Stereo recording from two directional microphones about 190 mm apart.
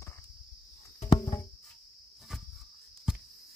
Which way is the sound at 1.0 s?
20° left (ahead or behind).